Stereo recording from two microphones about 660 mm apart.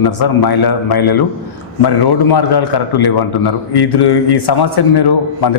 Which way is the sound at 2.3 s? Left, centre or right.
Left.